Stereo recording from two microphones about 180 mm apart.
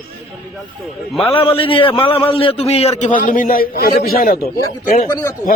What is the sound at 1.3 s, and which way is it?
A man's voice, 30° left (ahead or behind).